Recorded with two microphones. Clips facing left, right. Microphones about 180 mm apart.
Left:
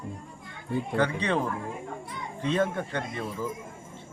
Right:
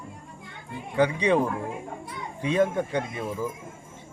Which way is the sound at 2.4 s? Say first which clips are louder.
Right 3 dB; 10° right (ahead or behind).